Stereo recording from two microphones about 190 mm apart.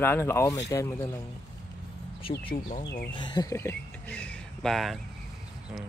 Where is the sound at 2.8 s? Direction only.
55° left (ahead or behind).